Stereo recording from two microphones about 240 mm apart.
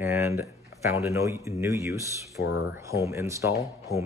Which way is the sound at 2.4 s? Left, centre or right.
Left.